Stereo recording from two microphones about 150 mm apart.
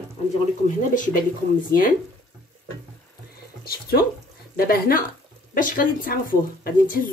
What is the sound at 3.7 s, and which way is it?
Speech, 90° left.